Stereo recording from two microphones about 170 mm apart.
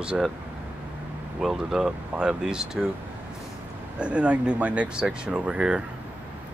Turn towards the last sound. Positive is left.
turn(degrees=-5)  # may be behind; listen again after turning